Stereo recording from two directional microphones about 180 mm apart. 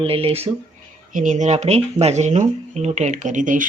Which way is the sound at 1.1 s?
45° right (ahead or behind).